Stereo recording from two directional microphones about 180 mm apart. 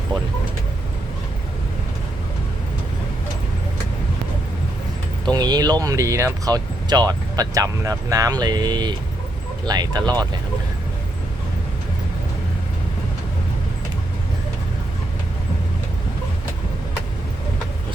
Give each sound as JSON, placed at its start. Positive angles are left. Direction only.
{"t": 5.2, "sound": "speech", "side_deg": -20}